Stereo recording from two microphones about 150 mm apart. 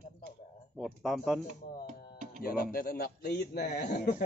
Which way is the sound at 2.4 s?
90° left.